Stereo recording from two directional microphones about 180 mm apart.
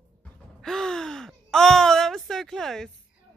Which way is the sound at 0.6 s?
5° left (ahead or behind).